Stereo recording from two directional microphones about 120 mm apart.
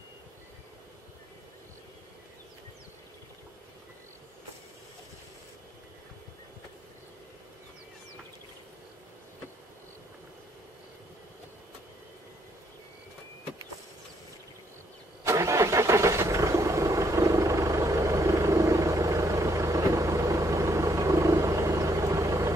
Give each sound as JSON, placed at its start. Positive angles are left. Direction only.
{"t": 15.2, "sound": "vehicle", "side_deg": -25}